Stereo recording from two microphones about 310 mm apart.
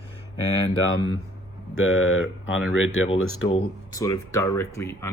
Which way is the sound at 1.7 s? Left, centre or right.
Left.